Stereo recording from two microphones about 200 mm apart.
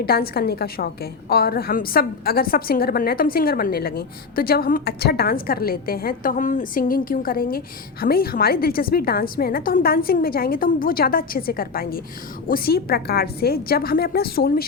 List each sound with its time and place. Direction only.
0.0 s a woman's voice: 50° left (ahead or behind)